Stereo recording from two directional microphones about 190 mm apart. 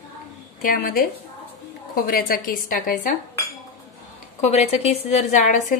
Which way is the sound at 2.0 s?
50° left (ahead or behind).